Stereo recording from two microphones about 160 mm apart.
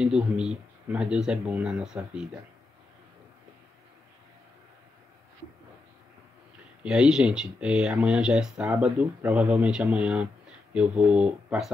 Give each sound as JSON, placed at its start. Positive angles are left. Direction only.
{"t": 0.0, "sound": "speech", "side_deg": -5}
{"t": 6.8, "sound": "speech", "side_deg": -5}